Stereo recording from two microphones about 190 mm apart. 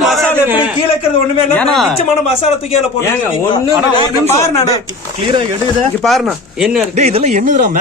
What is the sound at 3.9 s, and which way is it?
Speech, 20° left (ahead or behind).